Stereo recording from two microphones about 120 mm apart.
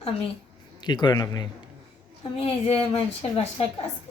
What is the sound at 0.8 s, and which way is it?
Speech, 40° left (ahead or behind).